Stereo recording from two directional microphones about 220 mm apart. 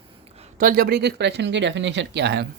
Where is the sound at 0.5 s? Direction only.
40° right (ahead or behind).